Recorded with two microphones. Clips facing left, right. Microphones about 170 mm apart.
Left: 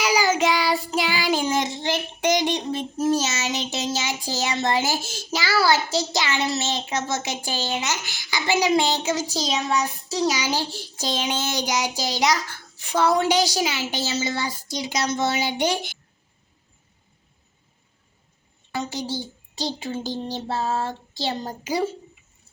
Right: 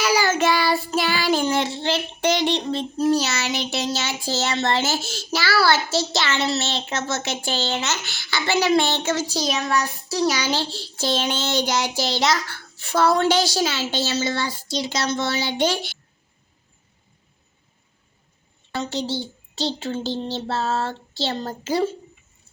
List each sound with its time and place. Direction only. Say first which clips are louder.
0.0 s child singing: right 1 dB; 15° left (ahead or behind)
3.2 s child singing: right 1 dB; 65° right (ahead or behind)
4.2 s a woman's voice: right 2 dB; 15° left (ahead or behind)
4.9 s a woman's voice: right 2 dB; 70° right (ahead or behind)
5.3 s a woman's voice: right 1 dB; 20° left (ahead or behind)
8.0 s a woman's voice: right 1 dB; 65° right (ahead or behind)
8.3 s a woman's voice: right 1 dB; 15° left (ahead or behind)
18.8 s a woman's voice: right 2 dB; 70° right (ahead or behind)
19.9 s a woman's voice: right 2 dB; 15° left (ahead or behind)